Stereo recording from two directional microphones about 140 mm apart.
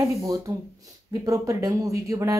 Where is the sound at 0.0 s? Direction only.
25° right (ahead or behind).